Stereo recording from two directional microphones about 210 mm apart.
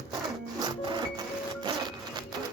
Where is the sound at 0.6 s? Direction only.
20° right (ahead or behind).